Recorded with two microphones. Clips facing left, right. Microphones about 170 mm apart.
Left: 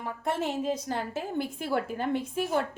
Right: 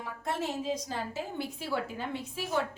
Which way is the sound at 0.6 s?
55° left (ahead or behind).